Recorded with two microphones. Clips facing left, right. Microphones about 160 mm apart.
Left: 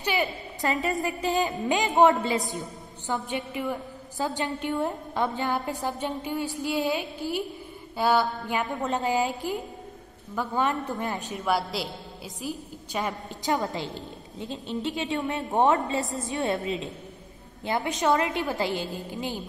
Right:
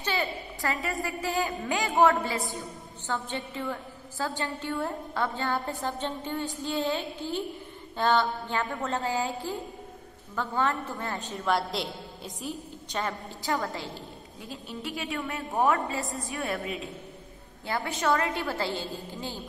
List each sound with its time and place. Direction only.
0.0 s a woman's voice: 15° left (ahead or behind)
11.5 s a woman's voice: centre (ahead or behind)
13.0 s a woman's voice: 20° left (ahead or behind)